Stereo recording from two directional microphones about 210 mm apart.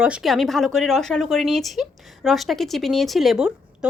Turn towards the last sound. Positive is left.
turn(degrees=-5)  # may be behind; listen again after turning